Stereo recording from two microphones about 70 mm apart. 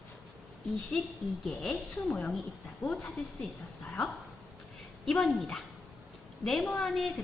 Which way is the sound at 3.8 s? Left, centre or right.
Left.